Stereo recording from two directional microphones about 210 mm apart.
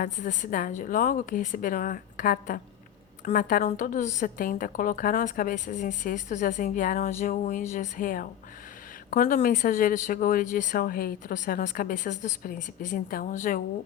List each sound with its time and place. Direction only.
0.0 s a woman's voice: 40° left (ahead or behind)